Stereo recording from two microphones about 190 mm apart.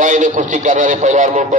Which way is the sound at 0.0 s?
40° right (ahead or behind).